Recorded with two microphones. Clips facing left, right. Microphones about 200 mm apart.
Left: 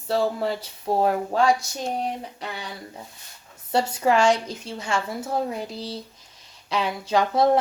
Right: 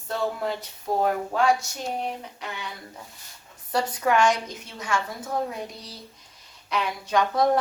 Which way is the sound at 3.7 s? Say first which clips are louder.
Left 3 dB; 25° left (ahead or behind).